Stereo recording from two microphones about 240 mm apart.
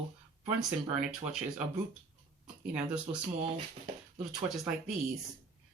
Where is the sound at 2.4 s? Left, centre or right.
Centre.